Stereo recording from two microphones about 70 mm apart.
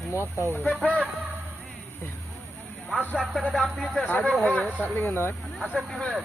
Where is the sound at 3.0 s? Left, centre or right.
Right.